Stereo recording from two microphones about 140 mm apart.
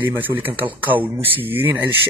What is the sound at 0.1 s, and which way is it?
Speech, 15° right (ahead or behind).